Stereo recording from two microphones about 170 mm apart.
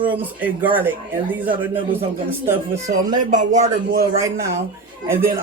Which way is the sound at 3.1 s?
50° right (ahead or behind).